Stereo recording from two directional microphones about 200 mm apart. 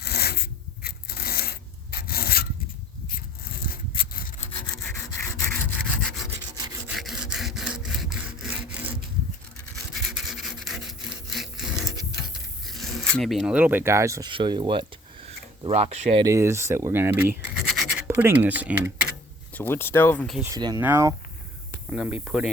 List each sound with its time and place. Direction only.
0.0 s a sound: 50° left (ahead or behind)
3.1 s rub: 45° left (ahead or behind)
6.0 s wood: centre (ahead or behind)
6.6 s wood: 20° right (ahead or behind)
6.8 s sawing: centre (ahead or behind)
9.9 s rub: centre (ahead or behind)
12.6 s speech: centre (ahead or behind); by 16.2 s 30° right (ahead or behind)
16.2 s speech: 15° right (ahead or behind)
19.5 s speech: 10° left (ahead or behind)
20.4 s speech: 20° right (ahead or behind)